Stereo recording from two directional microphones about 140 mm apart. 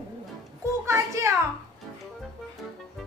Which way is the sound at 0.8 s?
20° right (ahead or behind).